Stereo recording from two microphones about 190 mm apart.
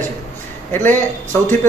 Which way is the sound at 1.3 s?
15° left (ahead or behind).